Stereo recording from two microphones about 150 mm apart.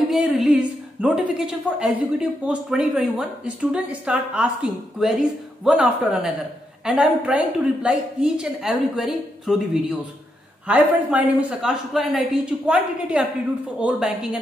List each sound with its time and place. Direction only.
0.1 s a woman's voice: 5° right (ahead or behind)